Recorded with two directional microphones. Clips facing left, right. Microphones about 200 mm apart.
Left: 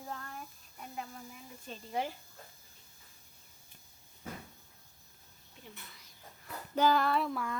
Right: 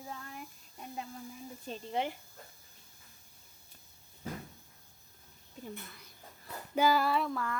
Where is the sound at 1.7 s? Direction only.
25° right (ahead or behind).